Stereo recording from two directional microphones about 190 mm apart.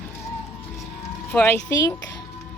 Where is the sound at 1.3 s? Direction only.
10° left (ahead or behind).